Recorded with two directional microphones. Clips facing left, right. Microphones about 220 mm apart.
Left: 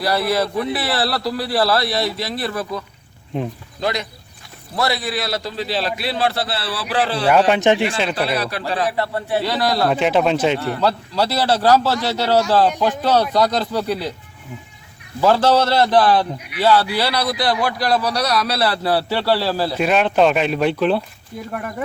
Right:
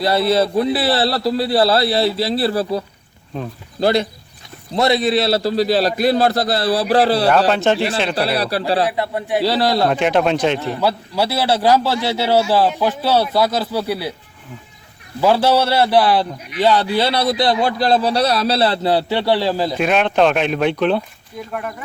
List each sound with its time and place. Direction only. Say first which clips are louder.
0.0 s a man's voice: right 3 dB; 25° right (ahead or behind)
7.3 s speech: even; 10° left (ahead or behind)
8.1 s a man's voice: right 3 dB; 35° right (ahead or behind)
8.9 s a man's voice: right 1 dB; 15° right (ahead or behind)
9.4 s a man's voice: right 4 dB; 30° right (ahead or behind)
9.9 s speech: right 1 dB; centre (ahead or behind)
10.6 s a man's voice: even; 15° right (ahead or behind)
15.2 s a man's voice: even; 10° right (ahead or behind)
19.7 s speech: left 2 dB; centre (ahead or behind)